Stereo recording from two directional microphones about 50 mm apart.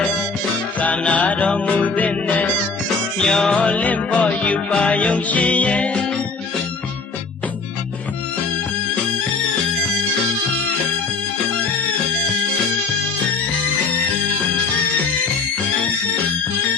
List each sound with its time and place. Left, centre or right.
0.8 s music: left
3.2 s music: centre
3.7 s music: left